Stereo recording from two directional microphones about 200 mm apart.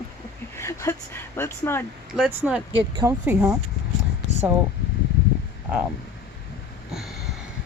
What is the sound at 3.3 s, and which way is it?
Speech, 10° right (ahead or behind).